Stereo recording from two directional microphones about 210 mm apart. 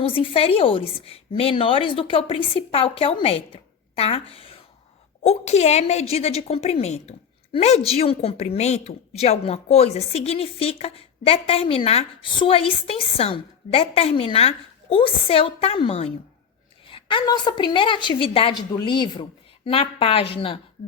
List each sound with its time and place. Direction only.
0.0 s a woman's voice: 25° left (ahead or behind)